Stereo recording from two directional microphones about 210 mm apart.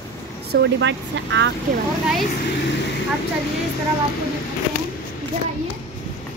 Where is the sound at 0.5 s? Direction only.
60° right (ahead or behind).